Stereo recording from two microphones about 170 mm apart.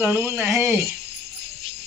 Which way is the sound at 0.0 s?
15° right (ahead or behind).